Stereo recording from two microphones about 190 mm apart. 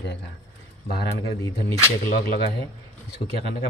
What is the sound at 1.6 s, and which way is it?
Speech, 50° left (ahead or behind).